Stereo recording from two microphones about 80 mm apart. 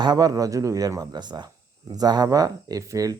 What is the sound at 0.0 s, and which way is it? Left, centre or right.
Speech, right.